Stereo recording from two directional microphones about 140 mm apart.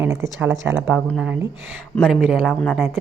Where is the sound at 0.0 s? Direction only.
20° right (ahead or behind).